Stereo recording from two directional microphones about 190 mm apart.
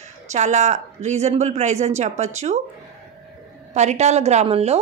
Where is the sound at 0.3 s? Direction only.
35° right (ahead or behind).